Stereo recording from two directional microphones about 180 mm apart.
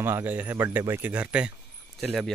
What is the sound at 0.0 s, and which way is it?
Speech, 10° right (ahead or behind).